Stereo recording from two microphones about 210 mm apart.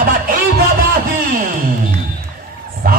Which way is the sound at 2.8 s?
45° right (ahead or behind).